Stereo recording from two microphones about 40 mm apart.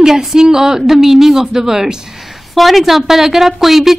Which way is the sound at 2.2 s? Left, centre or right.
Centre.